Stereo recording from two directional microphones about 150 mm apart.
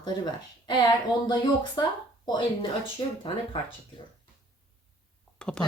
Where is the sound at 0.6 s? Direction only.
30° left (ahead or behind).